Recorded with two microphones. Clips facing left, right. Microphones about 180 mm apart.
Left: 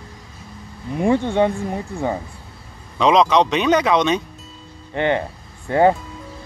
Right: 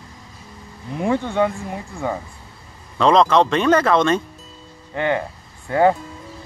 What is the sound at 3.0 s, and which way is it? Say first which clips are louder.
Speech: even; centre (ahead or behind).